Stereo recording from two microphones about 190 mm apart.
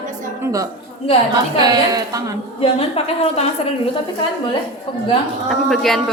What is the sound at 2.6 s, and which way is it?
Speech, 30° left (ahead or behind).